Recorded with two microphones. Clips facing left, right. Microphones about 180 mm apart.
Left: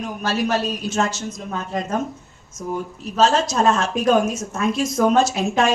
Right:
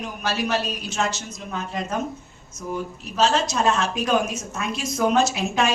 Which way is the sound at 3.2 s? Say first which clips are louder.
Left 3 dB; 45° left (ahead or behind).